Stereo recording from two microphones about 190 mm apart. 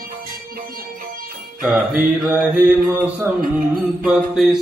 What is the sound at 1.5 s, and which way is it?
Mantra, 5° right (ahead or behind).